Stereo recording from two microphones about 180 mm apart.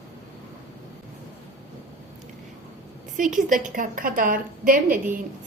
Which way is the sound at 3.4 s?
45° right (ahead or behind).